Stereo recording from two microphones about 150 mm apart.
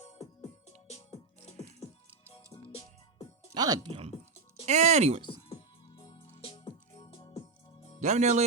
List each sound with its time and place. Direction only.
0.0 s music: 50° left (ahead or behind)
2.3 s music: 40° left (ahead or behind)
3.5 s speech: 25° right (ahead or behind)
4.6 s speech: 50° right (ahead or behind)
5.5 s music: 35° left (ahead or behind)
7.9 s speech: 50° right (ahead or behind)